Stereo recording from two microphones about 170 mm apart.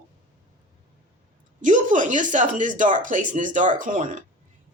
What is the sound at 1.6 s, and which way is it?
Speech, 50° right (ahead or behind).